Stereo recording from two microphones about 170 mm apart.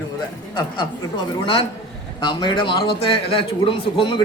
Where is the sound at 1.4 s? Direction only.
30° left (ahead or behind).